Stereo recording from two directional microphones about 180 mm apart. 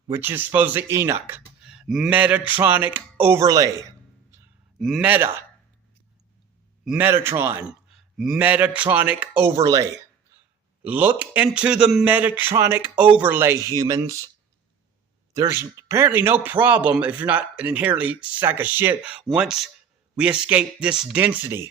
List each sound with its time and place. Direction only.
0.1 s a man's voice: 10° right (ahead or behind)
4.8 s speech: centre (ahead or behind)
5.0 s a man's voice: 10° right (ahead or behind)
6.8 s a man's voice: 10° right (ahead or behind)
7.9 s a man's voice: centre (ahead or behind); by 9.8 s 20° right (ahead or behind)
10.8 s a man's voice: 10° right (ahead or behind)
15.3 s a man's voice: 15° right (ahead or behind)